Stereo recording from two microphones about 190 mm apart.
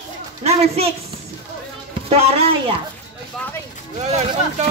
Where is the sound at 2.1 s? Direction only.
30° right (ahead or behind).